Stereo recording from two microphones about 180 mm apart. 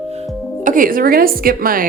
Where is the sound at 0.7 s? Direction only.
50° right (ahead or behind).